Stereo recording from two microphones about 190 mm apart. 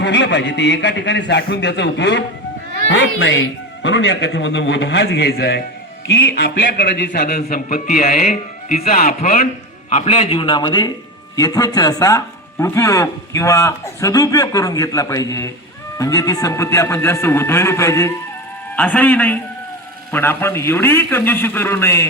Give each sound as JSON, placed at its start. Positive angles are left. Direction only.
{"t": 0.0, "sound": "a man's voice", "side_deg": 70}
{"t": 9.9, "sound": "a man's voice", "side_deg": 35}